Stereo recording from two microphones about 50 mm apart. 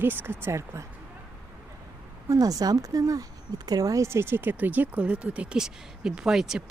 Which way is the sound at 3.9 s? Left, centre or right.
Right.